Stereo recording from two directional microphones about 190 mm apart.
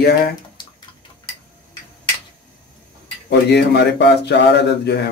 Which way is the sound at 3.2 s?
60° left (ahead or behind).